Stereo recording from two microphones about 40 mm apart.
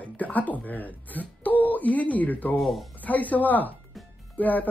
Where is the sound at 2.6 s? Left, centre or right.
Centre.